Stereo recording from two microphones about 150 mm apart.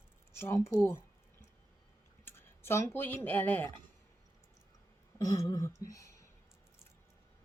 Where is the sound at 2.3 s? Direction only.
15° left (ahead or behind).